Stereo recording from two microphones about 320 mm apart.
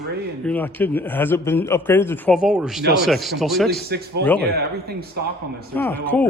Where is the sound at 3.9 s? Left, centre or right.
Right.